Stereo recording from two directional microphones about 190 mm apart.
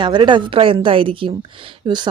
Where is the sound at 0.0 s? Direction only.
25° right (ahead or behind).